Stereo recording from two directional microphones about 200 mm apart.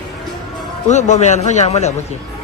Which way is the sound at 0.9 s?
35° left (ahead or behind).